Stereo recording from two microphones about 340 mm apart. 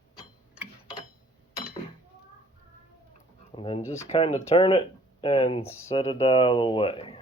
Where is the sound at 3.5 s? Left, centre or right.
Centre.